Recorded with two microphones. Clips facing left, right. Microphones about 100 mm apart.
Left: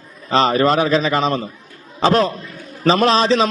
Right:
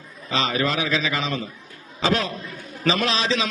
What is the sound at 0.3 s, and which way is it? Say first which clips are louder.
A man's voice: left 9 dB; 40° left (ahead or behind).